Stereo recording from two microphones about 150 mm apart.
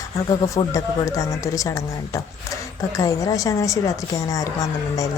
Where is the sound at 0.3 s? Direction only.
20° left (ahead or behind).